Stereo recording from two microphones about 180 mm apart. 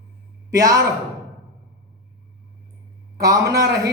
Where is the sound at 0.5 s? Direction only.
20° right (ahead or behind).